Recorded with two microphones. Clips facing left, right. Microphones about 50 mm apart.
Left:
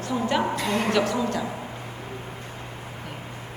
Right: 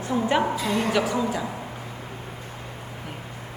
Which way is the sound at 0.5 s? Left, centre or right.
Left.